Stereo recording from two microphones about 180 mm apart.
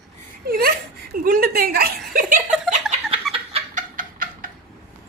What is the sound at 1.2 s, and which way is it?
A woman's voice, 55° right (ahead or behind).